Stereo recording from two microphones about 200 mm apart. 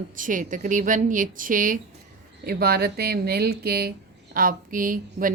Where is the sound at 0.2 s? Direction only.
40° right (ahead or behind).